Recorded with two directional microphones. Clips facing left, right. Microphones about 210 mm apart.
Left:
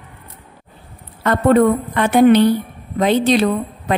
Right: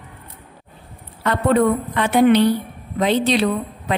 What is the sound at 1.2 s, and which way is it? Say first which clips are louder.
A woman's voice: left 4 dB; 50° left (ahead or behind).